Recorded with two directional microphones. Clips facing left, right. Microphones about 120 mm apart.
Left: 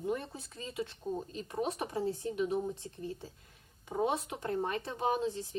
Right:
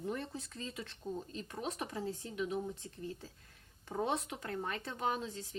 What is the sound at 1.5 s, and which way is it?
Speech, 30° left (ahead or behind).